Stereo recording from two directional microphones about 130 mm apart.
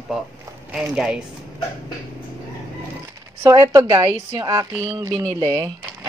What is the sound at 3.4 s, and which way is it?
A woman's voice, 25° right (ahead or behind).